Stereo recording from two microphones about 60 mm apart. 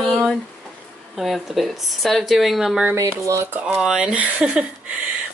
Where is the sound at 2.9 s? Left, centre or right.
Right.